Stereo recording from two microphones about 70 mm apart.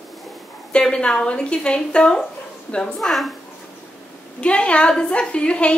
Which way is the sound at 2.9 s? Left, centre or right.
Centre.